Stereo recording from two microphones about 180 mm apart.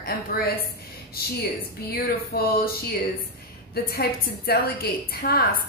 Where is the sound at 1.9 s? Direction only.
60° left (ahead or behind).